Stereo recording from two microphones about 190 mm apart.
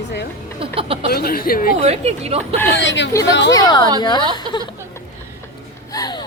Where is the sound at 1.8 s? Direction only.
35° right (ahead or behind).